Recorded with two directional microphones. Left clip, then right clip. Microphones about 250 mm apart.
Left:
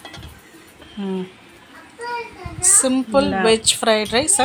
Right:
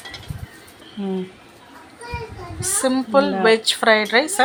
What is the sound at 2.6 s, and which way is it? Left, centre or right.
Speech, centre.